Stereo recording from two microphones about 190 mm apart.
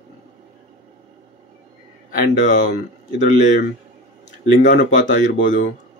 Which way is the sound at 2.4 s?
40° left (ahead or behind).